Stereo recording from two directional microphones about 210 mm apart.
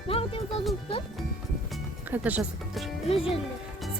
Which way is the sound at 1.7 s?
5° right (ahead or behind).